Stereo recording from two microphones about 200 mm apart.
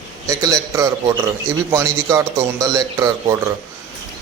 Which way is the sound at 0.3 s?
15° right (ahead or behind).